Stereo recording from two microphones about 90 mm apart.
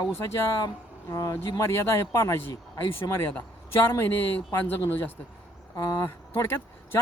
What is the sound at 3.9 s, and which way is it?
A man's voice, 25° left (ahead or behind).